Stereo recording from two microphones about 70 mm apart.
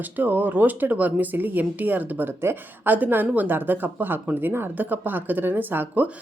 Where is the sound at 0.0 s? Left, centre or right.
Right.